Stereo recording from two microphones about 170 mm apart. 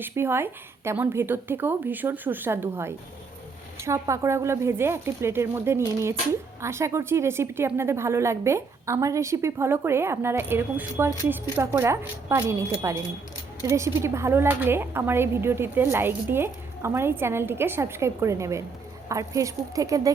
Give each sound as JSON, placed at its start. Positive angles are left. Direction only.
{"t": 0.0, "sound": "speech", "side_deg": -15}